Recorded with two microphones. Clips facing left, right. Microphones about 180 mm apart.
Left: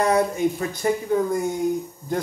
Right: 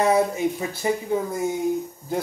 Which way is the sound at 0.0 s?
5° right (ahead or behind).